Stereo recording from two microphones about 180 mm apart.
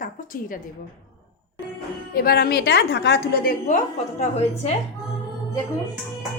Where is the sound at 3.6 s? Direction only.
40° left (ahead or behind).